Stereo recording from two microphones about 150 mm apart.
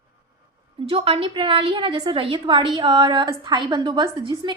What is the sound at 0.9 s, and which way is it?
A woman's voice, 40° right (ahead or behind).